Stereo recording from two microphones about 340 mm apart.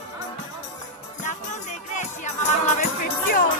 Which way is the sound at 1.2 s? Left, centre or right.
Left.